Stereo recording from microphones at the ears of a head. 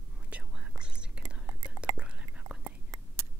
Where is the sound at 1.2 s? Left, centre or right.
Right.